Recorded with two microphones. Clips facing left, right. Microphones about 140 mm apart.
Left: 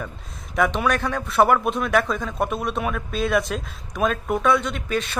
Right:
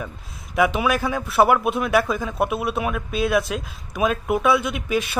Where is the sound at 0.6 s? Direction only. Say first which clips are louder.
Right 1 dB; 5° right (ahead or behind).